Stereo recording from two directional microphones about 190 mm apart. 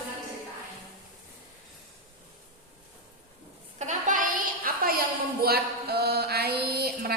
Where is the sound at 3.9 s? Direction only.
45° right (ahead or behind).